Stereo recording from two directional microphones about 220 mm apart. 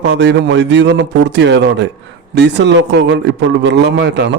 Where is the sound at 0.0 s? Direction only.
50° right (ahead or behind).